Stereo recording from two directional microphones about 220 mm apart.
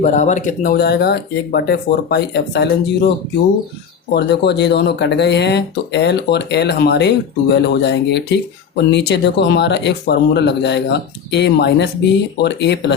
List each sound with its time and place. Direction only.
0.0 s speech: 35° left (ahead or behind)
4.1 s speech: 50° left (ahead or behind)